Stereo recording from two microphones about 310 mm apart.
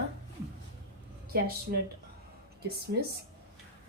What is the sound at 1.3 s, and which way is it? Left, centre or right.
Speech, right.